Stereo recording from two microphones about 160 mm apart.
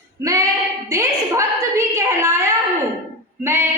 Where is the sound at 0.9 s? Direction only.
20° right (ahead or behind).